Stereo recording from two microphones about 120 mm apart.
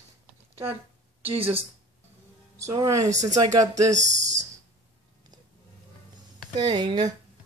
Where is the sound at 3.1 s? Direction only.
80° right.